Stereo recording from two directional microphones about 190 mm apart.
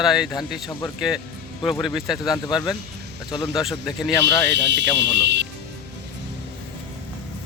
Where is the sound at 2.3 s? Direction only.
20° left (ahead or behind).